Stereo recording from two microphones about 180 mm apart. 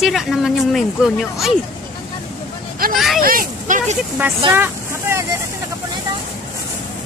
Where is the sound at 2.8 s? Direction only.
55° right (ahead or behind).